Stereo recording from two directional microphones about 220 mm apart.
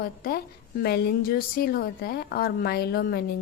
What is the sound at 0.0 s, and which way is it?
A woman's voice, 40° left (ahead or behind).